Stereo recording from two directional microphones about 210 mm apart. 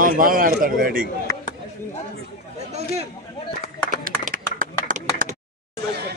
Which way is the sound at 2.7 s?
30° right (ahead or behind).